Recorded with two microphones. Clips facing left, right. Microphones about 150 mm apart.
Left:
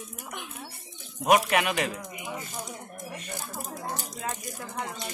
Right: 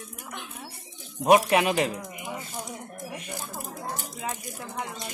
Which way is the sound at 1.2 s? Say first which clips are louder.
Right 3 dB; 30° right (ahead or behind).